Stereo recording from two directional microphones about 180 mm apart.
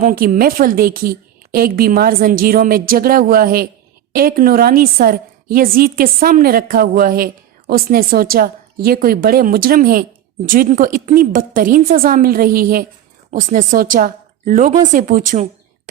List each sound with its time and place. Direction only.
0.0 s a woman's voice: 50° right (ahead or behind)